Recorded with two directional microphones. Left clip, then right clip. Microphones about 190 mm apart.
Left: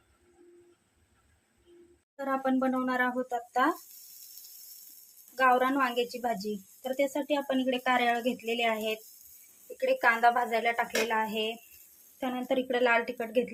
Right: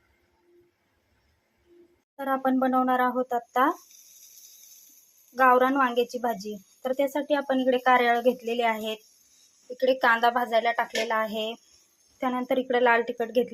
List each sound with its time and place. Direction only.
2.1 s speech: 5° right (ahead or behind)
5.4 s speech: 5° right (ahead or behind)
12.2 s speech: centre (ahead or behind)